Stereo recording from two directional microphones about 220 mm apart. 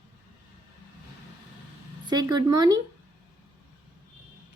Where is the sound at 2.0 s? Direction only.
20° right (ahead or behind).